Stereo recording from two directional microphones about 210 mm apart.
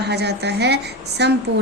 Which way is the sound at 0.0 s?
50° right (ahead or behind).